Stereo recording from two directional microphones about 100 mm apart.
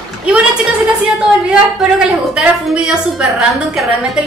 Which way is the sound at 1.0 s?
5° right (ahead or behind).